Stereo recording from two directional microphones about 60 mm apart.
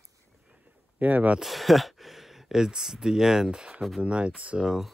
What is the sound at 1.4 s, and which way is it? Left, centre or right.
Speech, centre.